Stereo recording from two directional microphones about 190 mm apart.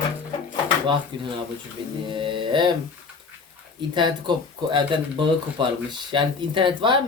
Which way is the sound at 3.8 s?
25° right (ahead or behind).